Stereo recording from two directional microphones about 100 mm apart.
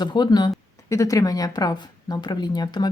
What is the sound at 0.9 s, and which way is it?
Speech, 35° left (ahead or behind).